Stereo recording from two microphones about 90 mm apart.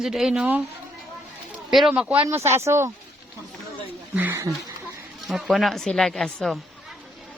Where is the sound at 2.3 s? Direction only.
30° right (ahead or behind).